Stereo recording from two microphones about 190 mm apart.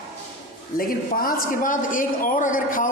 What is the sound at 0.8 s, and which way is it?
A man's voice, 50° left (ahead or behind).